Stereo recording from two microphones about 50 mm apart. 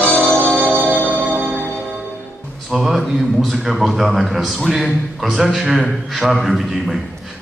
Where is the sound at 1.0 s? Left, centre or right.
Right.